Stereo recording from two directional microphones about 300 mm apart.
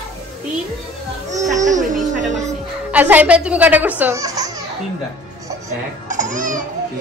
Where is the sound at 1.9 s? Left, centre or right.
Right.